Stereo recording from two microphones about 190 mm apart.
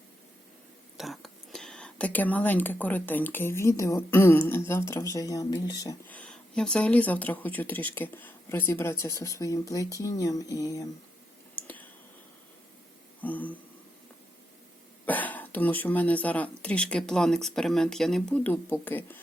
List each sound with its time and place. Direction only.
0.9 s speech: centre (ahead or behind); by 6.0 s 20° left (ahead or behind)
6.1 s speech: 5° left (ahead or behind)
11.5 s clicking: 10° left (ahead or behind)
13.2 s speech: 10° left (ahead or behind)
15.0 s speech: 10° left (ahead or behind)